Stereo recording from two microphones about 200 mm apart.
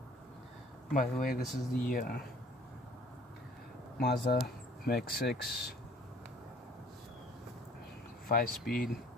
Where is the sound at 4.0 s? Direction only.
50° left (ahead or behind).